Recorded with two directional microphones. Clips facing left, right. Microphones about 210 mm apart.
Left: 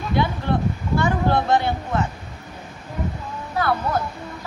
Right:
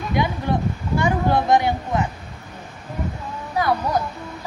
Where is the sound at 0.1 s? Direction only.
15° right (ahead or behind).